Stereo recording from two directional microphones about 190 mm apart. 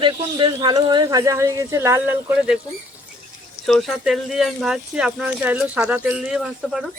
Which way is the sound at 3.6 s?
Centre (ahead or behind).